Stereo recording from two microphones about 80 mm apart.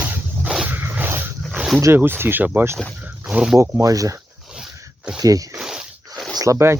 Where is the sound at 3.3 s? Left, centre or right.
Centre.